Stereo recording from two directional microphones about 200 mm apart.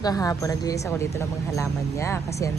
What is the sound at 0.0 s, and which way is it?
Speech, 20° left (ahead or behind).